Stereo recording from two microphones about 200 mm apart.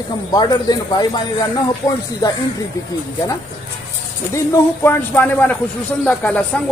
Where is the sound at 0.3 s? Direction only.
20° left (ahead or behind).